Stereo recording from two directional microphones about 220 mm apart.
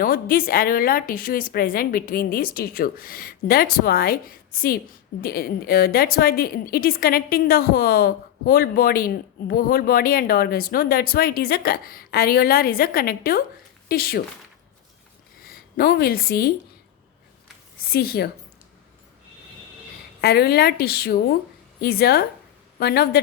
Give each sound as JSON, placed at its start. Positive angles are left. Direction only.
{"t": 0.0, "sound": "a woman's voice", "side_deg": 40}
{"t": 15.4, "sound": "a woman's voice", "side_deg": 45}
{"t": 17.9, "sound": "a woman's voice", "side_deg": 45}
{"t": 20.2, "sound": "a woman's voice", "side_deg": 45}